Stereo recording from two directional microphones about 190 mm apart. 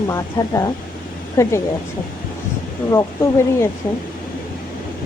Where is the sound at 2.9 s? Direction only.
15° left (ahead or behind).